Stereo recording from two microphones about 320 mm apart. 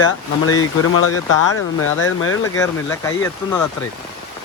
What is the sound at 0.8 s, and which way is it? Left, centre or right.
Speech, left.